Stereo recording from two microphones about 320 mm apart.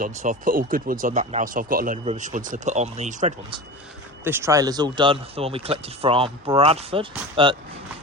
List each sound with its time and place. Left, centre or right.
0.0 s speech: right
4.2 s speech: centre